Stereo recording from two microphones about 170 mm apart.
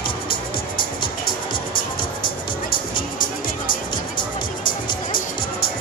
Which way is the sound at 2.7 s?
55° left (ahead or behind).